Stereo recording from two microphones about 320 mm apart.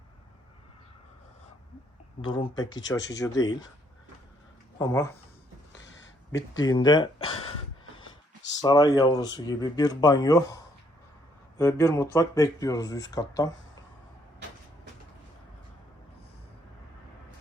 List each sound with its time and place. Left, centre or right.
2.2 s speech: centre
4.8 s speech: centre
6.6 s speech: centre
8.6 s speech: centre